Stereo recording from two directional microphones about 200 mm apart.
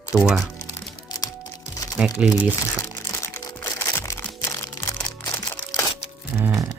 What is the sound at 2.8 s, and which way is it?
Music, 15° left (ahead or behind).